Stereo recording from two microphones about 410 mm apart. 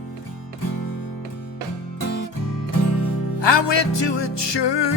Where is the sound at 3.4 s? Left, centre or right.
Left.